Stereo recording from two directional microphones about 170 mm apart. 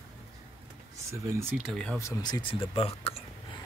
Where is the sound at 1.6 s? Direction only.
5° left (ahead or behind).